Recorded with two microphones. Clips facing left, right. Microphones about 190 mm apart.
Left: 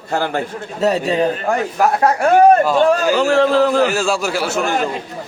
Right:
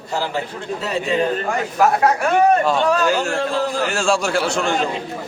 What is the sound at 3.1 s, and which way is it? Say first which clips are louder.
Speech: left 7 dB; 65° left (ahead or behind).